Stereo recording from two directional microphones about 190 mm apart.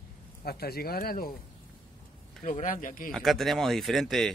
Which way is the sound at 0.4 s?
55° left (ahead or behind).